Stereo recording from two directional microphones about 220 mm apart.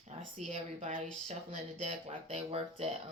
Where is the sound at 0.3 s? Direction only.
30° right (ahead or behind).